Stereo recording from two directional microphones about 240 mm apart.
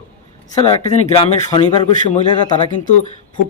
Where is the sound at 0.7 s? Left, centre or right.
Centre.